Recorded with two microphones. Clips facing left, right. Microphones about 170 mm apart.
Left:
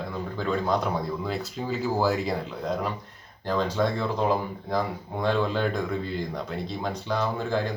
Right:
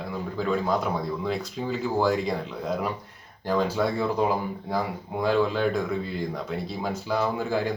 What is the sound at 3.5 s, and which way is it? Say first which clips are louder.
Speech: right 1 dB; 10° right (ahead or behind).